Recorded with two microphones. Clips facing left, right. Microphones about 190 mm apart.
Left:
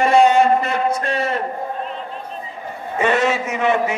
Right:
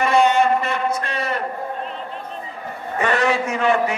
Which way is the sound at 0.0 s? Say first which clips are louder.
Left 3 dB; 35° left (ahead or behind).